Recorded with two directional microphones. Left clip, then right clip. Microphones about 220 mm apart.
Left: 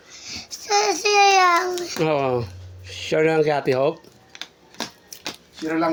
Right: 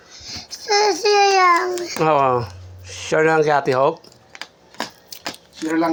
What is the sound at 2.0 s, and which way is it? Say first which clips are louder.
A child's voice: right 6 dB; 15° left (ahead or behind).